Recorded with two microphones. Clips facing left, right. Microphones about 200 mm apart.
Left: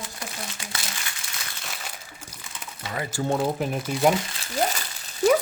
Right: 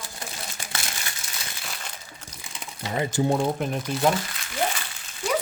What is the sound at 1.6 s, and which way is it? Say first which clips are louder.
Crumpling: even; 5° left (ahead or behind).